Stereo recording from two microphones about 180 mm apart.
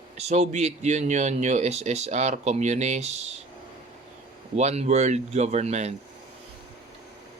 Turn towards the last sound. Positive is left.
turn(degrees=-40)  # may be behind; listen again after turning